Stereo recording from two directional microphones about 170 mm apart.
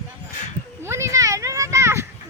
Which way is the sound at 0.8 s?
15° right (ahead or behind).